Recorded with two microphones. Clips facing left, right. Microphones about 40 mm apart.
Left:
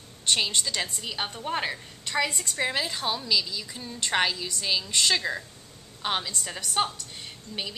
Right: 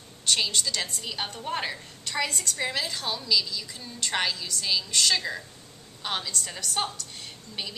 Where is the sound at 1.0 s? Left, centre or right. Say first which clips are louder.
Left 1 dB; centre.